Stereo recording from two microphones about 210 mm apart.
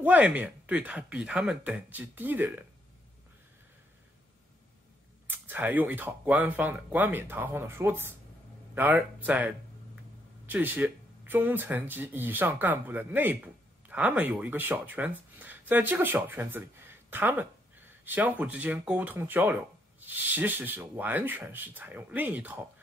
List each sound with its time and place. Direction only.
0.0 s speech: 5° right (ahead or behind)
5.2 s speech: 10° right (ahead or behind)